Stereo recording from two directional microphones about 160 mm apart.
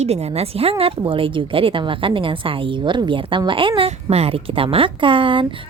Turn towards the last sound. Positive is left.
turn(degrees=-30)  # may be behind; listen again after turning